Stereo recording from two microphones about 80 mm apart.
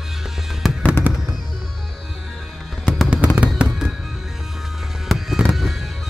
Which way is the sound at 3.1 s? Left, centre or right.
Centre.